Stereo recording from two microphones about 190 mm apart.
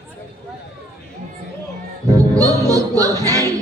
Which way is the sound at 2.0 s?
15° right (ahead or behind).